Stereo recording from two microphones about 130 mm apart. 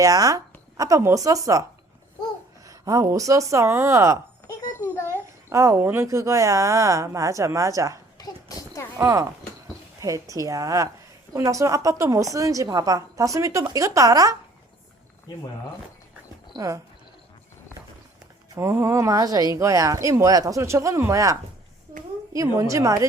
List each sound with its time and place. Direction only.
0.0 s a woman's voice: 25° right (ahead or behind)
2.6 s a woman's voice: 25° right (ahead or behind)
4.8 s a sound: 20° left (ahead or behind)
5.5 s a woman's voice: 20° right (ahead or behind)
8.2 s a sound: 25° left (ahead or behind)
9.0 s a woman's voice: 25° right (ahead or behind)
16.6 s a woman's voice: 25° right (ahead or behind)
18.5 s a woman's voice: 20° right (ahead or behind)